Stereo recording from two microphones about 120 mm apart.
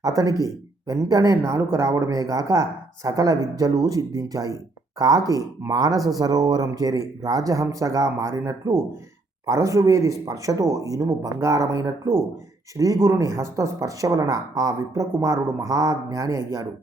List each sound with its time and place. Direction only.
0.0 s speech: 30° right (ahead or behind)